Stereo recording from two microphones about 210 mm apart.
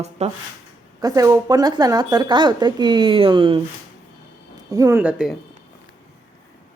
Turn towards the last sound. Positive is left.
turn(degrees=-5)  # may be behind; listen again after turning